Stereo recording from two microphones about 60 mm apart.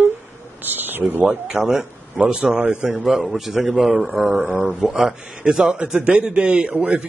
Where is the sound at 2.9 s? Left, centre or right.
Centre.